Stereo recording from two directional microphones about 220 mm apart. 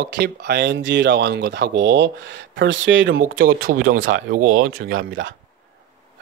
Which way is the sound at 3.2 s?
40° right (ahead or behind).